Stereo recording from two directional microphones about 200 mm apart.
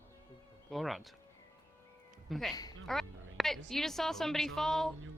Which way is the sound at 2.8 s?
Centre (ahead or behind).